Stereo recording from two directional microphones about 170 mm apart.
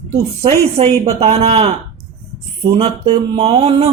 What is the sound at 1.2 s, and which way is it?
Speech, 40° right (ahead or behind).